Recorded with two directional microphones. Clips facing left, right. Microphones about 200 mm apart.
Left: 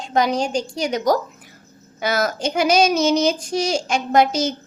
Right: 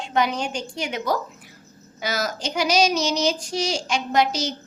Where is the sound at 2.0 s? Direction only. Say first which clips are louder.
Left 5 dB; 55° left (ahead or behind).